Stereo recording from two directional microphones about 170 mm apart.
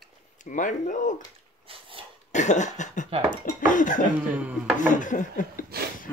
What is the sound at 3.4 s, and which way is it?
Dishes, 50° left (ahead or behind).